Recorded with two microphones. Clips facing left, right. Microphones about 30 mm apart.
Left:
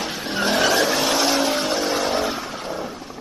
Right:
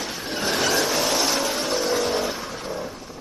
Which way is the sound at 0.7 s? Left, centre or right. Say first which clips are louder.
Left 3 dB; centre.